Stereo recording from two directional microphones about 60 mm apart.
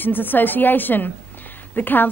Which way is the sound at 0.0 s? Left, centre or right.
Left.